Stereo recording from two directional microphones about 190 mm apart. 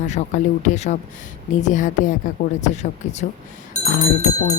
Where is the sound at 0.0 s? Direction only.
40° left (ahead or behind).